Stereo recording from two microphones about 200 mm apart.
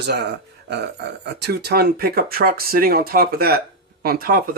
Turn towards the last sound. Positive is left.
turn(degrees=-45)  # may be behind; listen again after turning